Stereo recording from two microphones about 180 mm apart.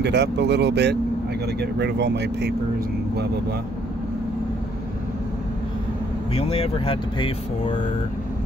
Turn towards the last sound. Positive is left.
turn(degrees=25)  # may be behind; listen again after turning